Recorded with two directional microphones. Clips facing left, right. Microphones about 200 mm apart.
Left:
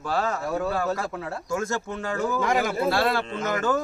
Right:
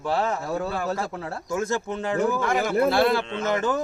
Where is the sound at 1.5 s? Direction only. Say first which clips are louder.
Right 3 dB; 20° right (ahead or behind).